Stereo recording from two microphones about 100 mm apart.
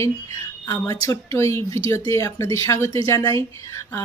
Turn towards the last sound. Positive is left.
turn(degrees=30)  # may be behind; listen again after turning